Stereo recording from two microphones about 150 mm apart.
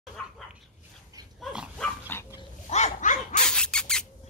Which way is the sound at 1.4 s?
5° right (ahead or behind).